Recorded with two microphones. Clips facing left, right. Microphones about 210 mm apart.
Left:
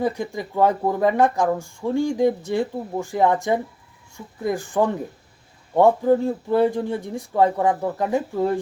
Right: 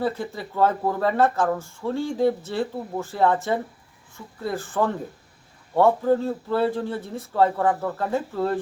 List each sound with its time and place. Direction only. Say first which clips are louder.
0.0 s speech: left 2 dB; 15° left (ahead or behind)